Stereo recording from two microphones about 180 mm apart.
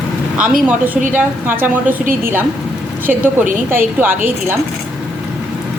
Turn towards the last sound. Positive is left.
turn(degrees=-10)  # may be behind; listen again after turning